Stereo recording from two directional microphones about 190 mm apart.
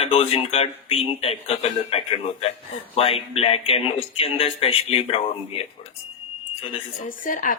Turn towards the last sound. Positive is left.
turn(degrees=45)  # may be behind; listen again after turning